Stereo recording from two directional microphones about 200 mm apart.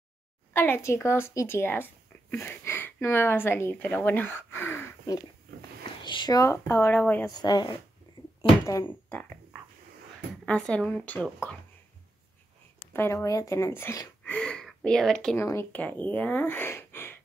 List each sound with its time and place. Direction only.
0.5 s speech: 10° left (ahead or behind)
7.3 s speech: 20° left (ahead or behind)
10.4 s speech: 5° left (ahead or behind)
12.9 s speech: 15° left (ahead or behind)